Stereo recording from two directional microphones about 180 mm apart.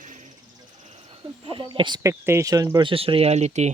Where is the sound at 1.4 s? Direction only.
30° right (ahead or behind).